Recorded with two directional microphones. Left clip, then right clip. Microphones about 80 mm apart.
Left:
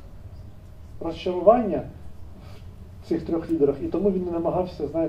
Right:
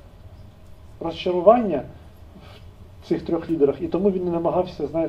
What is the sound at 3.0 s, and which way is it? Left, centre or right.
Speech, right.